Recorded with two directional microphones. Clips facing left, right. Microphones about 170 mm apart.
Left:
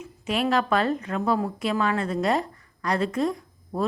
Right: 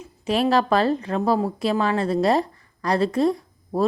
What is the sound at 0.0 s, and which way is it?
A woman's voice, 35° right (ahead or behind).